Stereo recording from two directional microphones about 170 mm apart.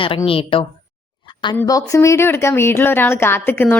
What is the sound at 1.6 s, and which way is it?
Speech, 20° left (ahead or behind).